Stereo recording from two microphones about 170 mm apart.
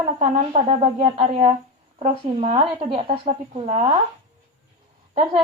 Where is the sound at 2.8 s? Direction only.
30° right (ahead or behind).